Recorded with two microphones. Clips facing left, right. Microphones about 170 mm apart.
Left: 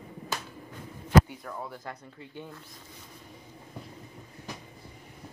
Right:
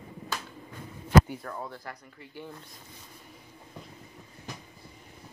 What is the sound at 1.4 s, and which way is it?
Speech, 5° left (ahead or behind).